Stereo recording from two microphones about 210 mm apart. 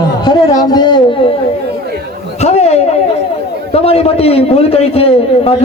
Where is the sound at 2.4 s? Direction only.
30° left (ahead or behind).